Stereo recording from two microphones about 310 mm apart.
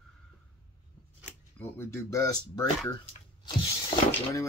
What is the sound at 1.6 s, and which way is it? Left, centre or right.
Speech, centre.